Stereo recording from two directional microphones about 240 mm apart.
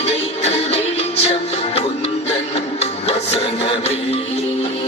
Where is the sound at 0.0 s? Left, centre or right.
Left.